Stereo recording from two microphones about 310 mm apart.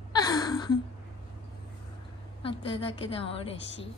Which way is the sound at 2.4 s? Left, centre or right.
Centre.